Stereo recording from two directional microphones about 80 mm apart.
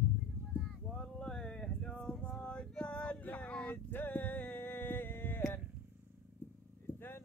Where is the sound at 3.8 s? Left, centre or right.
Left.